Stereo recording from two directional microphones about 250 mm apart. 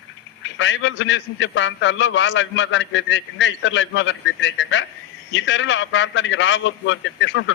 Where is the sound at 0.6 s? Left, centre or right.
Left.